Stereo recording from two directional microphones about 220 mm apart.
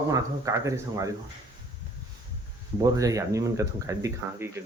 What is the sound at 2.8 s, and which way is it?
Speech, 15° right (ahead or behind).